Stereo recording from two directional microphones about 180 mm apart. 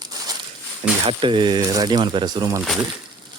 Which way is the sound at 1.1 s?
30° right (ahead or behind).